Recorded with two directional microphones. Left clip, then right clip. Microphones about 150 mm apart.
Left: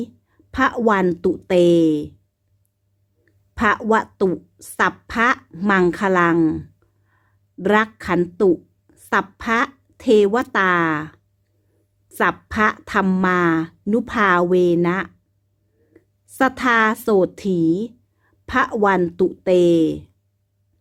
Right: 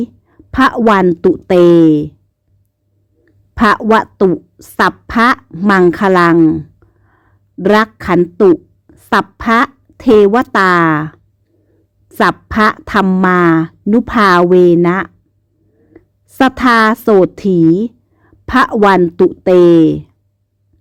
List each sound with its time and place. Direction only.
0.0 s a woman's voice: 30° right (ahead or behind)
3.5 s a woman's voice: 35° right (ahead or behind)
6.3 s a sound: 20° right (ahead or behind); by 8.2 s 35° right (ahead or behind)
8.9 s a woman's voice: 30° right (ahead or behind)